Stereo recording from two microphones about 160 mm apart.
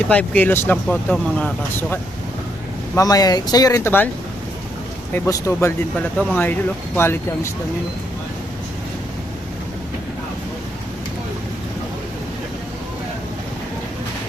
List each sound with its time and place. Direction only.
0.1 s speech: 10° left (ahead or behind)
2.9 s speech: 20° left (ahead or behind)
5.1 s speech: 15° left (ahead or behind)